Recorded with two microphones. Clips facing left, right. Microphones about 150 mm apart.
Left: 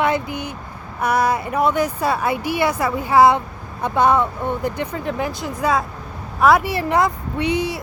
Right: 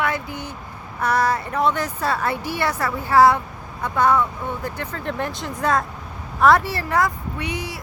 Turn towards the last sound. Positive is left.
turn(degrees=25)  # may be behind; listen again after turning